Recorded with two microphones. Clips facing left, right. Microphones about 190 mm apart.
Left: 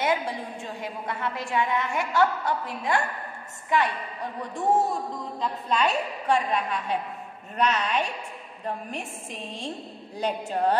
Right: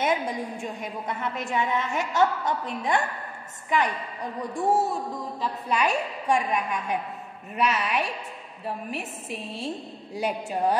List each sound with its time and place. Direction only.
0.0 s a woman's voice: 20° right (ahead or behind)
4.4 s a woman's voice: 10° right (ahead or behind)